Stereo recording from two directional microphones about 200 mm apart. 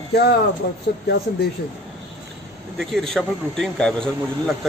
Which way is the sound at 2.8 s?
Centre (ahead or behind).